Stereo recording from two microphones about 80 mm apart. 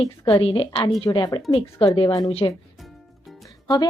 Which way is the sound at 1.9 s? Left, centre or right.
Left.